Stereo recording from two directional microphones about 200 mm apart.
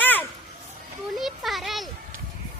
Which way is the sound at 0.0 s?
10° left (ahead or behind).